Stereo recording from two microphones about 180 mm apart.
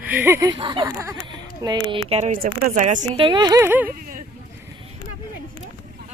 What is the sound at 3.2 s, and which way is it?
Speech, 25° right (ahead or behind).